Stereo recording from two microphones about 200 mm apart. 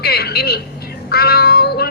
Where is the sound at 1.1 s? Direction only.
50° left (ahead or behind).